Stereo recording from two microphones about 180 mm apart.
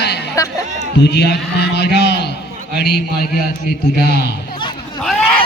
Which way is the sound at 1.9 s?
70° left (ahead or behind).